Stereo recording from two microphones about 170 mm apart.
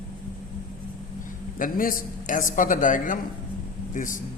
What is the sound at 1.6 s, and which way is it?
Speech, 55° left (ahead or behind).